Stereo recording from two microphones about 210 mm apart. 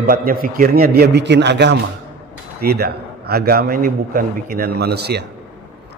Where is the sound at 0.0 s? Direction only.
45° right (ahead or behind).